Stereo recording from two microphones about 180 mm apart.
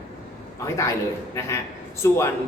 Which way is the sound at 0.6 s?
15° left (ahead or behind).